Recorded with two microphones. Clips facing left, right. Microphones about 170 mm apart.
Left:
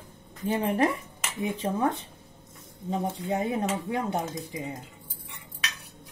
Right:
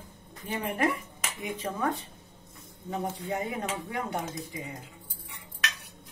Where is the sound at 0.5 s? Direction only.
30° left (ahead or behind).